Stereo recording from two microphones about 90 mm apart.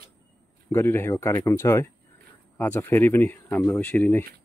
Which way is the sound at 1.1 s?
40° left (ahead or behind).